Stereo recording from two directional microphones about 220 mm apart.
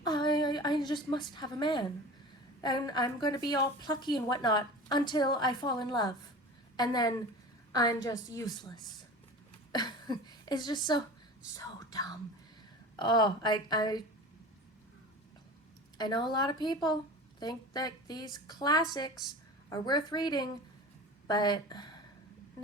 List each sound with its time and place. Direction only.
0.0 s a woman's voice: 20° left (ahead or behind)
16.0 s a woman's voice: 20° left (ahead or behind)